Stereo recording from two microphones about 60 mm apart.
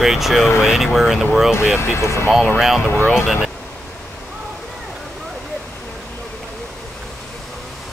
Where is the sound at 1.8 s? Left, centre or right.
Left.